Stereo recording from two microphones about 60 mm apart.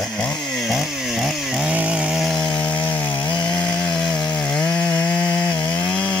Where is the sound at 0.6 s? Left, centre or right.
Centre.